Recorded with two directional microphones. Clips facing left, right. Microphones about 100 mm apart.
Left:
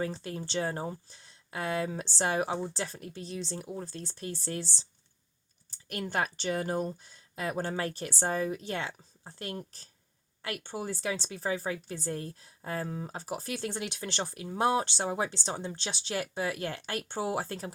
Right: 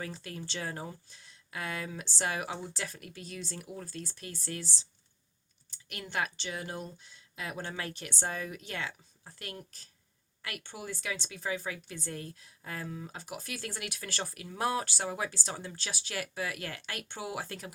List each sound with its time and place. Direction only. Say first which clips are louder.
0.0 s a woman's voice: left 6 dB; 30° left (ahead or behind)